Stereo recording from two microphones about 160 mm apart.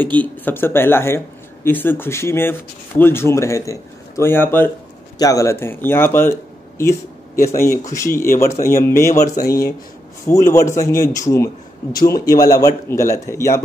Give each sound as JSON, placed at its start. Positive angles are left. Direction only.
{"t": 0.0, "sound": "speech", "side_deg": 10}
{"t": 7.4, "sound": "speech", "side_deg": 15}